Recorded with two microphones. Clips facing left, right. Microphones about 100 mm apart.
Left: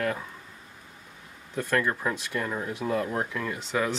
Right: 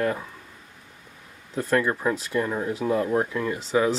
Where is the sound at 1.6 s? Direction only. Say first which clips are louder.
Right 4 dB; 5° right (ahead or behind).